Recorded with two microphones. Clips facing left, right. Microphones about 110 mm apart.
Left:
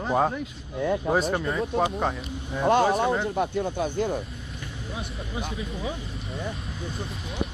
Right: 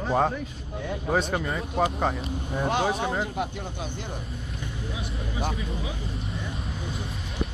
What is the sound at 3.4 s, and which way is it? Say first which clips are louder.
Speech: left 6 dB; 50° left (ahead or behind).